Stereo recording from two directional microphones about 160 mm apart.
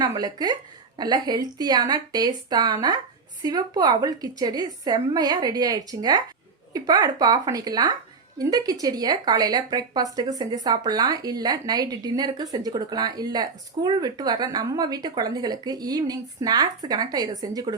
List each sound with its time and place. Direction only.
0.0 s speech: 25° right (ahead or behind)